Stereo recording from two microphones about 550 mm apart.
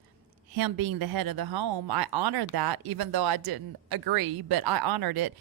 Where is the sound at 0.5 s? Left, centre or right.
Right.